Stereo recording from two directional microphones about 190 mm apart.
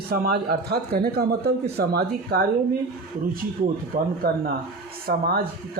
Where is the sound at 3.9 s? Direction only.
45° right (ahead or behind).